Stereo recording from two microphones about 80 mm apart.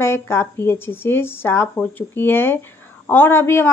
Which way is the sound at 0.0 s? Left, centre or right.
Left.